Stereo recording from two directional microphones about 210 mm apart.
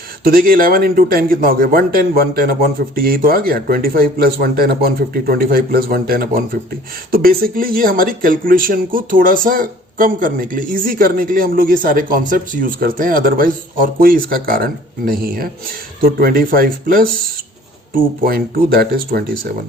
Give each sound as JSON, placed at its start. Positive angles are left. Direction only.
{"t": 0.3, "sound": "speech", "side_deg": -45}